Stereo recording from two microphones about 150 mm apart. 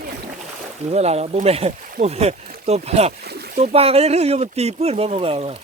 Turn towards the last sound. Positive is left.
turn(degrees=-40)  # may be behind; listen again after turning